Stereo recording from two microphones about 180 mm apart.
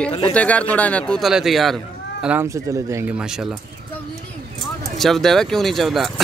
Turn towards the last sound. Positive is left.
turn(degrees=0)  # may be behind; listen again after turning